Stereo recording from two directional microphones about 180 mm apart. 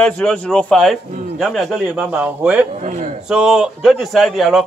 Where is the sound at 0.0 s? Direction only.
5° left (ahead or behind).